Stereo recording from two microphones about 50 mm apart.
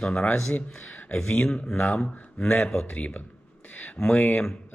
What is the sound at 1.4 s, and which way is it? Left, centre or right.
Speech, centre.